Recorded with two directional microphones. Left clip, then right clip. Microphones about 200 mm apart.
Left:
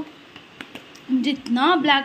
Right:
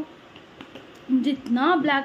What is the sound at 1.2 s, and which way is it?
Speech, 10° right (ahead or behind).